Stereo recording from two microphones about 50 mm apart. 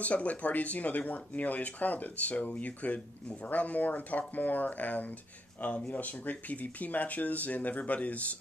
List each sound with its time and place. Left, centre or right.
0.0 s speech: left